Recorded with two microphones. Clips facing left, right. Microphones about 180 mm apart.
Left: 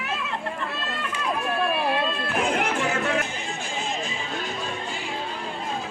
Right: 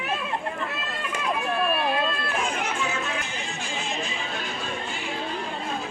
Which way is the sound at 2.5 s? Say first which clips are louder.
Left 4 dB; 65° left (ahead or behind).